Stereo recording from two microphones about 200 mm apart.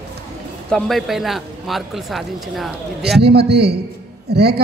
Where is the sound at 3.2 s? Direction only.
55° right (ahead or behind).